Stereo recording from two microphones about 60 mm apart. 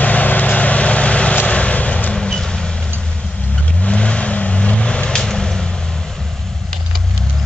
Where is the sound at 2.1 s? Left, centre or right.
Centre.